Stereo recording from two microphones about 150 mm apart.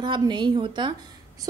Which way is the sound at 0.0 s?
30° right (ahead or behind).